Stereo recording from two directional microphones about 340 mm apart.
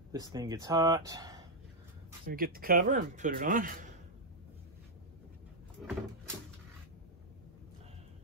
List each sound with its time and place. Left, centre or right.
0.1 s speech: centre
2.2 s speech: right
5.8 s cupboard open or close: centre